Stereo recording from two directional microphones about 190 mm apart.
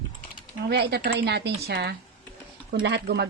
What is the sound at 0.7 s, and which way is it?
Speech, 60° right (ahead or behind).